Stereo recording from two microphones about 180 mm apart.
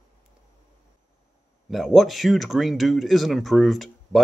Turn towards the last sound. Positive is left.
turn(degrees=0)  # may be behind; listen again after turning